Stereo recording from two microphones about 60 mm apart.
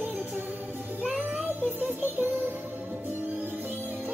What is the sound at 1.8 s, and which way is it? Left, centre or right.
Music, right.